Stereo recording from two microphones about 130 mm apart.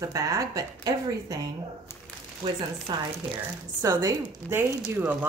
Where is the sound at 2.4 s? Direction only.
40° right (ahead or behind); by 4.6 s 25° right (ahead or behind).